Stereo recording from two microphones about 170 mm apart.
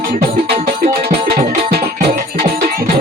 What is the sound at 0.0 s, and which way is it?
Music, 60° right (ahead or behind).